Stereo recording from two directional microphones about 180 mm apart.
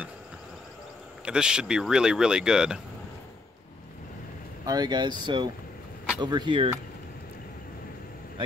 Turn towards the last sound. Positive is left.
turn(degrees=-25)  # may be behind; listen again after turning